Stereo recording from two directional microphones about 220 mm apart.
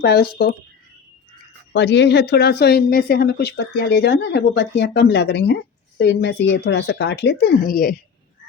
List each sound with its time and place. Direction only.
0.0 s speech: 45° left (ahead or behind)
1.7 s speech: 50° left (ahead or behind)